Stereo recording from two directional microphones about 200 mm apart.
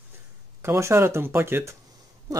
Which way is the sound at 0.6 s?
15° right (ahead or behind).